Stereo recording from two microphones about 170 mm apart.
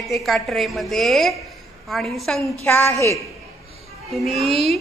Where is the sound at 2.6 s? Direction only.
15° left (ahead or behind).